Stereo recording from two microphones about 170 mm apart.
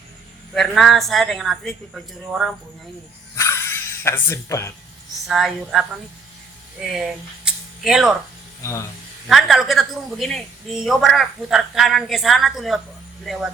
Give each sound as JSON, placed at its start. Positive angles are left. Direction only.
{"t": 0.5, "sound": "a woman's voice", "side_deg": 0}
{"t": 3.3, "sound": "a sound", "side_deg": 15}
{"t": 5.3, "sound": "a woman's voice", "side_deg": 0}
{"t": 7.4, "sound": "a sound", "side_deg": -5}
{"t": 8.6, "sound": "speech", "side_deg": 15}
{"t": 9.2, "sound": "a woman's voice", "side_deg": 0}